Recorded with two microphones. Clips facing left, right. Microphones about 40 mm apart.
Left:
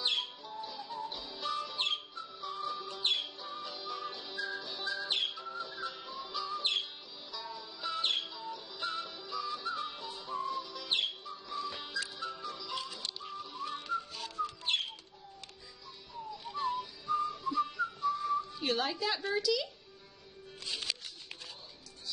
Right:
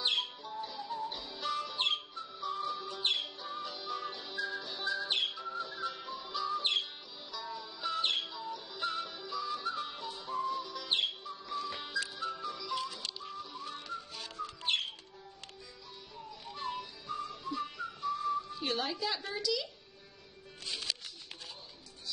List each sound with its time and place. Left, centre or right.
0.0 s music: right
0.4 s music: centre
8.0 s music: centre
8.4 s music: centre
12.5 s music: centre
14.1 s whistling: centre
17.0 s whistling: centre